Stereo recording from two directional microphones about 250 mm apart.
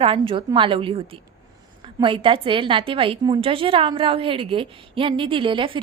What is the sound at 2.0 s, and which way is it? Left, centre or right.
A woman's voice, right.